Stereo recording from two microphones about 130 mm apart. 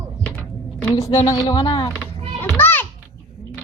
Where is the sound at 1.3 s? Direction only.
25° left (ahead or behind).